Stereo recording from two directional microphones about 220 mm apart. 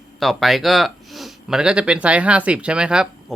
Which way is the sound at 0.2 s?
Centre (ahead or behind).